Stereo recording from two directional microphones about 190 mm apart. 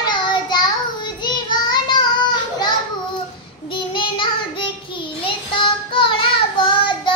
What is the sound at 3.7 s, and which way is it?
Child singing, 25° left (ahead or behind).